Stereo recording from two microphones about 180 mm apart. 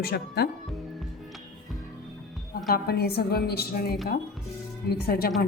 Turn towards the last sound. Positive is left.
turn(degrees=55)  # may be behind; listen again after turning